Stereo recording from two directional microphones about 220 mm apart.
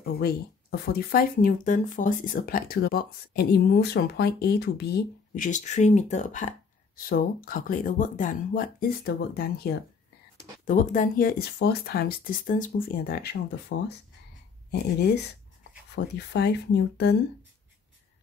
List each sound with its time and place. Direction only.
0.0 s speech: 45° left (ahead or behind)